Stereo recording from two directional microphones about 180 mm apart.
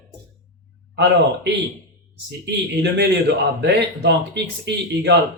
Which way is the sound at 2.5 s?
65° right (ahead or behind).